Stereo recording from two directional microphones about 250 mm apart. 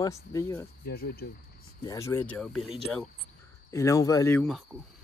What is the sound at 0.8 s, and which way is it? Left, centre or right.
Speech, left.